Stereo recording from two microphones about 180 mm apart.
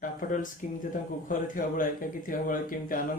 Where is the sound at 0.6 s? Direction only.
45° left (ahead or behind).